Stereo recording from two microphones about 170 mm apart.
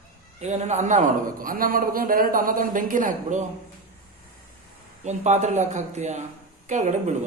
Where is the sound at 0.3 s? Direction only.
40° right (ahead or behind).